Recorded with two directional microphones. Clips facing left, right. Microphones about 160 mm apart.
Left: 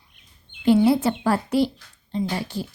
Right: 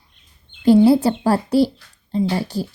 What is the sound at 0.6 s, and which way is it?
A woman's voice, 35° right (ahead or behind).